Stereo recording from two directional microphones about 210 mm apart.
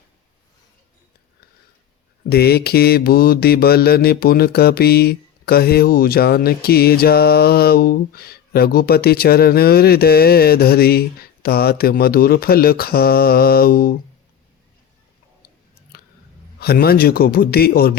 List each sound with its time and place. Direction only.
2.3 s mantra: 50° left (ahead or behind)
16.6 s mantra: 50° left (ahead or behind)